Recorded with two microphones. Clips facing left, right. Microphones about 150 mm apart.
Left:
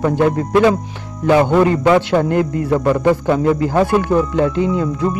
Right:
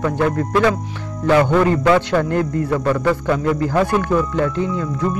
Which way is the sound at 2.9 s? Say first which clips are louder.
Left 4 dB; 25° left (ahead or behind).